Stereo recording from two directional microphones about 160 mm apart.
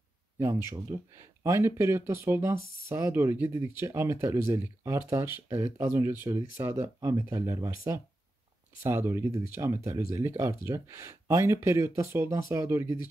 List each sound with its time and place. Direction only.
0.4 s speech: 20° right (ahead or behind)